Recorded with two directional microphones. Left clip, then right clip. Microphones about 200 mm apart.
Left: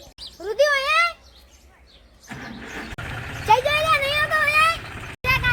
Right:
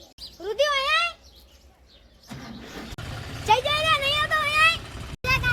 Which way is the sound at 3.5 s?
5° right (ahead or behind).